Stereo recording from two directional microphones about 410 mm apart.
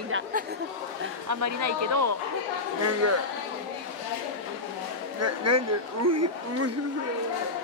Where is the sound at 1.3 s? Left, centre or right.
Right.